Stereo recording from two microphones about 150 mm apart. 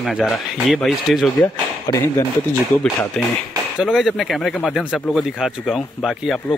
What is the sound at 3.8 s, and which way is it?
Speech, centre (ahead or behind).